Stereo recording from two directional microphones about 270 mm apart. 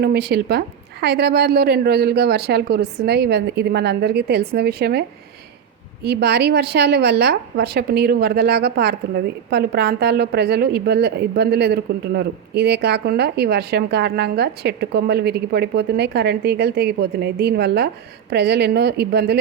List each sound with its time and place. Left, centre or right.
0.0 s a woman's voice: right